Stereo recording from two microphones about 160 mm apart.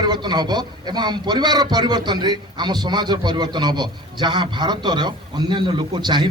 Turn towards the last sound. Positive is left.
turn(degrees=-30)  # may be behind; listen again after turning